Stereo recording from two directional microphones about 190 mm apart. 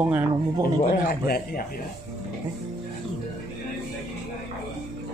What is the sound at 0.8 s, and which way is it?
Speech, 50° left (ahead or behind).